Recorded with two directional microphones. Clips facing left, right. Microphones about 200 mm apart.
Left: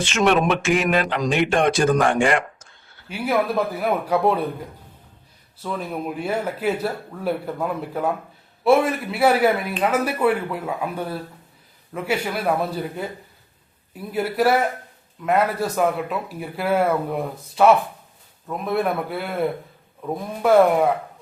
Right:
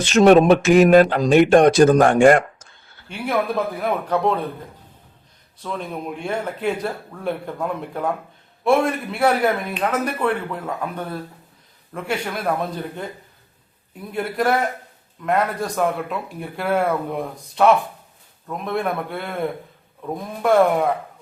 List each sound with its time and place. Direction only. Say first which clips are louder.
0.0 s speech: right 7 dB; 40° right (ahead or behind)
3.1 s a man's voice: left 1 dB; 5° left (ahead or behind)
5.5 s a man's voice: left 1 dB; 5° left (ahead or behind)